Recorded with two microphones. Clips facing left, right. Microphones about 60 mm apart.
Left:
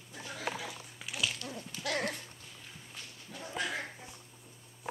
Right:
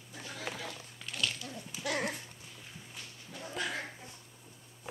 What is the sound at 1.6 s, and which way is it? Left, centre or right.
Horse, centre.